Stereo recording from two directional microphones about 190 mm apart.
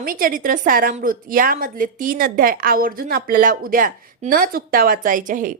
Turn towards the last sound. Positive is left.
turn(degrees=-45)  # may be behind; listen again after turning